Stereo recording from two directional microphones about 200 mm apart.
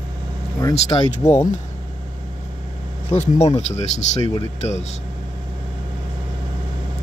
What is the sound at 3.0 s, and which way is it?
Speech, 35° left (ahead or behind).